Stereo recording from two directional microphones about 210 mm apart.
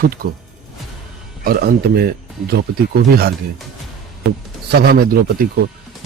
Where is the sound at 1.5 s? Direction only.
50° right (ahead or behind).